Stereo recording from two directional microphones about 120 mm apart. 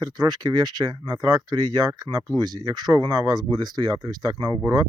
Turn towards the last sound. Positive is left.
turn(degrees=-35)  # may be behind; listen again after turning